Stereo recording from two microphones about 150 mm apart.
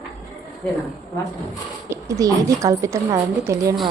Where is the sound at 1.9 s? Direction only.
20° right (ahead or behind).